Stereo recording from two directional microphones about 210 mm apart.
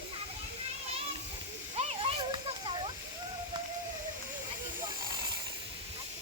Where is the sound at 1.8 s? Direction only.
25° right (ahead or behind).